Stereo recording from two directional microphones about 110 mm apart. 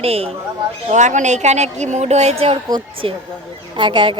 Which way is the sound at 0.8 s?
90° right.